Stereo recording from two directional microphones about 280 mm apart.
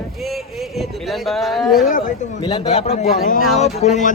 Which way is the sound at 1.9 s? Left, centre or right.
Left.